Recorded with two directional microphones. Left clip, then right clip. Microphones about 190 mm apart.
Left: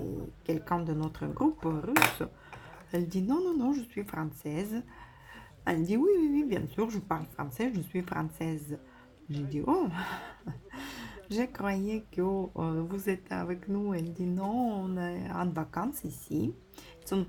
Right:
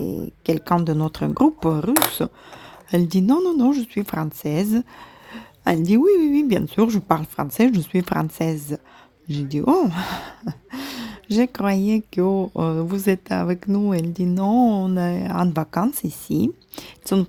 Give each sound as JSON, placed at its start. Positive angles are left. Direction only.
{"t": 0.0, "sound": "speech", "side_deg": -40}